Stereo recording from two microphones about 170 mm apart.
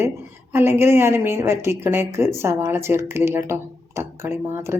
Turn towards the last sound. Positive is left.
turn(degrees=-15)  # may be behind; listen again after turning